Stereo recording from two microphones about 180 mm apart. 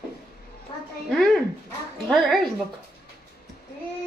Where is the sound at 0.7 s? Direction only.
30° left (ahead or behind).